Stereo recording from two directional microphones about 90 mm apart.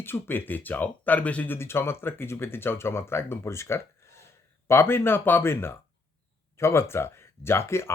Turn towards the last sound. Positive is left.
turn(degrees=30)  # may be behind; listen again after turning